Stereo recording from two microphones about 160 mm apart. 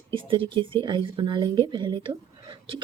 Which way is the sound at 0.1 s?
30° right (ahead or behind).